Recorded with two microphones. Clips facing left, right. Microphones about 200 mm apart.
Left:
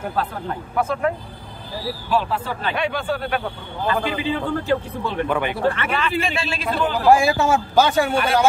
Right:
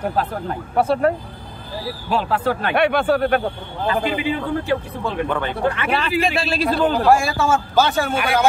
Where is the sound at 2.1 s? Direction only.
60° right (ahead or behind).